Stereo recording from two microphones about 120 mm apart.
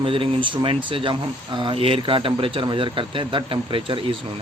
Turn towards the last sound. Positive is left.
turn(degrees=-45)  # may be behind; listen again after turning